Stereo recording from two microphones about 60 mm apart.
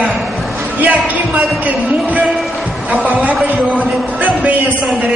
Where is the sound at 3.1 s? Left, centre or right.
Right.